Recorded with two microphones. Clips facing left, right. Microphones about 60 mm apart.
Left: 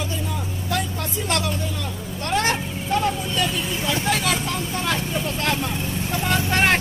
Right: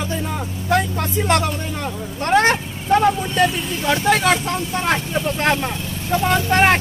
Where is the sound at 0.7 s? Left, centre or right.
Right.